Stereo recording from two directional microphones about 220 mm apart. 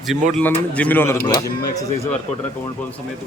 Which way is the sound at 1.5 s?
45° left (ahead or behind).